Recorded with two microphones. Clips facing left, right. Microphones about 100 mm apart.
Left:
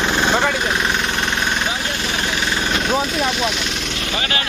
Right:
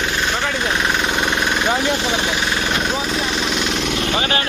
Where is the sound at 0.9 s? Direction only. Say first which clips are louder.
Right 2 dB; 10° right (ahead or behind).